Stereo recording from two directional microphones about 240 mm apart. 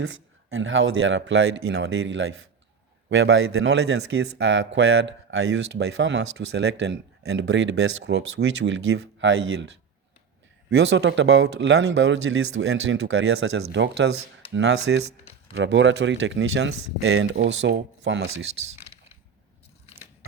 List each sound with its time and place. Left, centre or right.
0.0 s speech: right
10.7 s speech: right
18.5 s speech: right